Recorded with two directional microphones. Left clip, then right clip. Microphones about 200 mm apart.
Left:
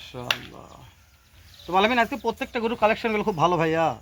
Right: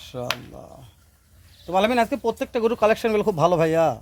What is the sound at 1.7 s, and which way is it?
Speech, 70° right (ahead or behind).